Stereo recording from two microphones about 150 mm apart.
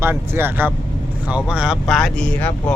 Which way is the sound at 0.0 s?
15° right (ahead or behind).